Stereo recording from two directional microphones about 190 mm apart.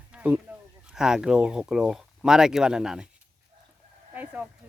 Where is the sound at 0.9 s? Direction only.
5° right (ahead or behind).